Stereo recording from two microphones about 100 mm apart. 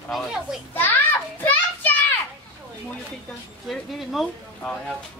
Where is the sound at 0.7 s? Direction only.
20° left (ahead or behind).